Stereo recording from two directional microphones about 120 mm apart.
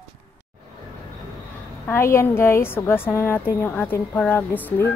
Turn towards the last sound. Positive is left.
turn(degrees=15)  # may be behind; listen again after turning